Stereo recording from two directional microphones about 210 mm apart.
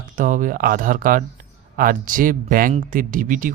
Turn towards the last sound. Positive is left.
turn(degrees=-40)  # may be behind; listen again after turning